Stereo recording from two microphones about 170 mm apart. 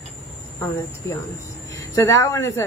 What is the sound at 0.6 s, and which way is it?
Speech, 15° left (ahead or behind).